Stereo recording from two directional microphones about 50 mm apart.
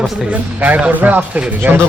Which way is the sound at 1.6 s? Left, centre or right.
Right.